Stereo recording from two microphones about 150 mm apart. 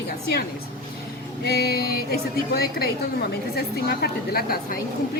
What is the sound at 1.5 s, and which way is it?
A woman's voice, 90° left.